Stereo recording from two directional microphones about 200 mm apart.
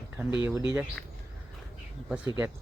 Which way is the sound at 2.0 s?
5° right (ahead or behind).